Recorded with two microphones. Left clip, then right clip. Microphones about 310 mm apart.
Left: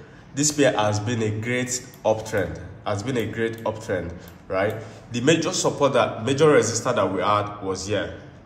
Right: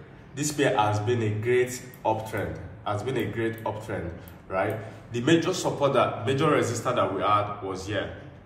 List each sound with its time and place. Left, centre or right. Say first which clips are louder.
0.4 s a man's voice: left 4 dB; left
5.1 s a man's voice: left 3 dB; left